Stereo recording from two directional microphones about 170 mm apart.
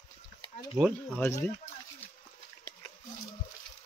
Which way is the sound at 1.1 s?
10° left (ahead or behind).